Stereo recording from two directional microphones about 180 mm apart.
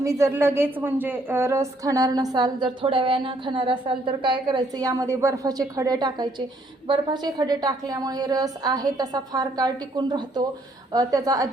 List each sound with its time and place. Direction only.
0.0 s speech: 15° right (ahead or behind)